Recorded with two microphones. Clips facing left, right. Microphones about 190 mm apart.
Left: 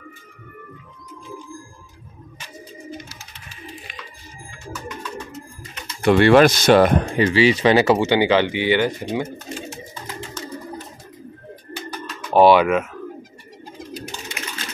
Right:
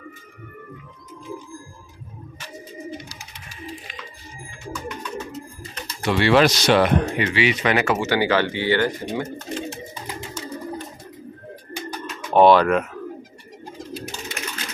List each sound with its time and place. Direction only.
6.0 s speech: 50° left (ahead or behind)
7.2 s speech: 35° left (ahead or behind)
8.1 s speech: 20° left (ahead or behind)
9.9 s bird: 15° right (ahead or behind)
12.3 s speech: 5° left (ahead or behind)